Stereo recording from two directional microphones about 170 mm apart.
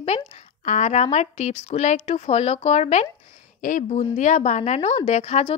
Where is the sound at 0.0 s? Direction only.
40° left (ahead or behind).